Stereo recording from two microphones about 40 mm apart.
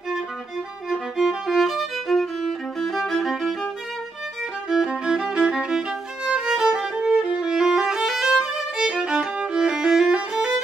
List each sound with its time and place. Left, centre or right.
0.8 s music: centre
1.7 s music: centre
4.8 s music: centre
6.3 s violin: right